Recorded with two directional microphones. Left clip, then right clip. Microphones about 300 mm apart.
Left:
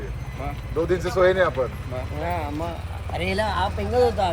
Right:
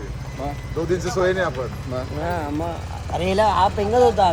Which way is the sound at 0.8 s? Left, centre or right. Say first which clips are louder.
Left 1 dB; left.